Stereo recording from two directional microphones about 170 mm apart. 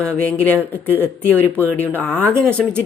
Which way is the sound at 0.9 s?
10° right (ahead or behind).